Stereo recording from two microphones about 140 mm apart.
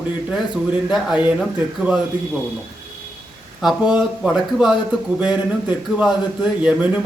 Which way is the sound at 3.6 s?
5° right (ahead or behind).